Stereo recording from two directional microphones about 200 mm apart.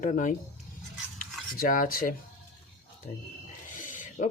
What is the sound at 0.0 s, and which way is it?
Speech, 40° left (ahead or behind).